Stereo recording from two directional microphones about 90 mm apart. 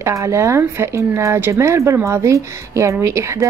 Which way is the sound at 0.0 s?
30° right (ahead or behind).